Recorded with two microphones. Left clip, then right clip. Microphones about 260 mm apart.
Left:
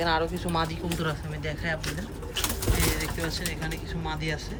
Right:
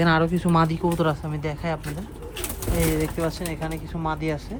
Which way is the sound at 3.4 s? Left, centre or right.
Centre.